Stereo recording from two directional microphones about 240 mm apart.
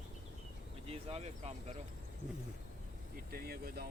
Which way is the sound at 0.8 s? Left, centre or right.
Right.